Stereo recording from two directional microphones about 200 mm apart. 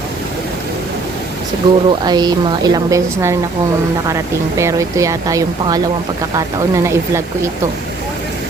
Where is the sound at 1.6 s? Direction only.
25° right (ahead or behind).